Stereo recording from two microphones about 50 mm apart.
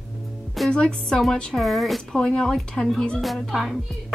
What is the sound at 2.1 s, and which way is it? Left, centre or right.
A woman's voice, centre.